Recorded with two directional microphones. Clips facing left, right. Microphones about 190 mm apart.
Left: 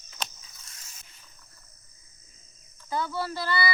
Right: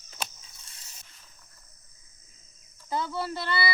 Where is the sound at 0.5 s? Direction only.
30° right (ahead or behind).